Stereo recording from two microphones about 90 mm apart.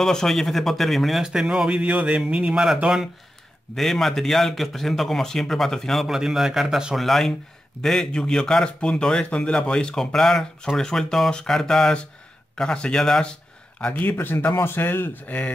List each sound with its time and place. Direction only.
0.0 s a man's voice: 5° left (ahead or behind)